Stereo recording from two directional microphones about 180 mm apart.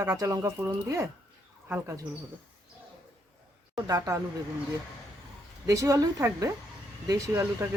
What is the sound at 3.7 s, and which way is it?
Speech, 20° right (ahead or behind).